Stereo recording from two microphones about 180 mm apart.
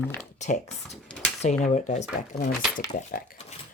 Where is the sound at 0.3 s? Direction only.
40° left (ahead or behind).